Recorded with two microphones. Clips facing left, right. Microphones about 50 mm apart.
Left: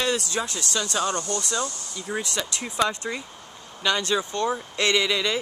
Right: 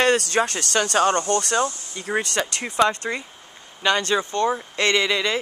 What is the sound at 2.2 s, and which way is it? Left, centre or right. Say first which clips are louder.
Speech: right 5 dB; right.